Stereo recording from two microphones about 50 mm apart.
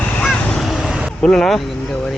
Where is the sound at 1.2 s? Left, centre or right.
Centre.